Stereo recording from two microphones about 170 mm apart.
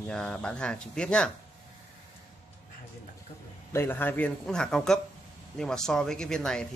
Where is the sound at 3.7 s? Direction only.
10° left (ahead or behind).